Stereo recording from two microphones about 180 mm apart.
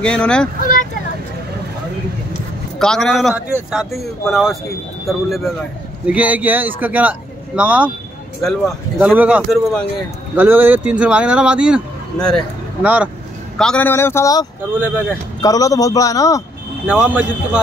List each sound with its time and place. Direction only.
0.0 s a man's voice: 5° left (ahead or behind)
2.8 s a man's voice: 5° left (ahead or behind)
8.9 s a man's voice: 5° right (ahead or behind)
10.3 s speech: 10° right (ahead or behind)
13.6 s speech: 5° left (ahead or behind)
14.7 s speech: 10° right (ahead or behind)
15.4 s a man's voice: 20° left (ahead or behind)
16.8 s speech: 5° right (ahead or behind)